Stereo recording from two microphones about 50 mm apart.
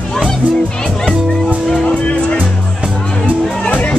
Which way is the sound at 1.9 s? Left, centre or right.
Left.